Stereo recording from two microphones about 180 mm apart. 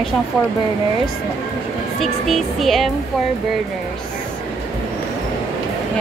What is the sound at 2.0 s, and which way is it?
Speech, centre (ahead or behind).